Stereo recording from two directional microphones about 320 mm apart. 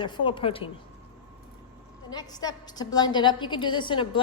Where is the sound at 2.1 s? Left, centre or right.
Centre.